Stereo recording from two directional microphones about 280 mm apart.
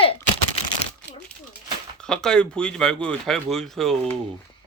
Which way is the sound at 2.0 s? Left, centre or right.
Centre.